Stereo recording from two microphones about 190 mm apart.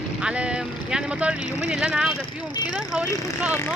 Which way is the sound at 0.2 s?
5° right (ahead or behind).